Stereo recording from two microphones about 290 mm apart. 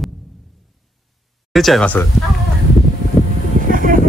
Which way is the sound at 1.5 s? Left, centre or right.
Centre.